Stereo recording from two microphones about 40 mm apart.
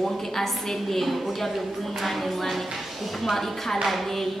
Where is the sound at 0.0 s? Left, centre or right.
Centre.